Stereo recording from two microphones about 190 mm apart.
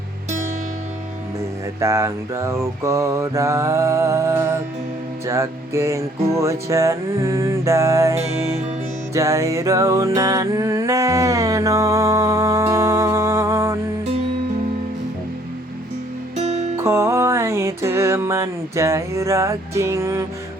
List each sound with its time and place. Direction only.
1.8 s music: 15° right (ahead or behind)
16.7 s music: 15° right (ahead or behind)